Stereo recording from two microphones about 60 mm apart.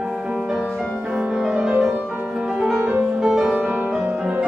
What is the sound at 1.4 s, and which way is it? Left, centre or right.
Music, centre.